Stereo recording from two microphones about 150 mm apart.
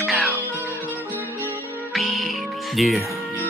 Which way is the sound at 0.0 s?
Centre (ahead or behind).